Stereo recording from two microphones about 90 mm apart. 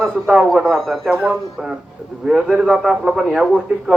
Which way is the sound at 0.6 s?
5° left (ahead or behind).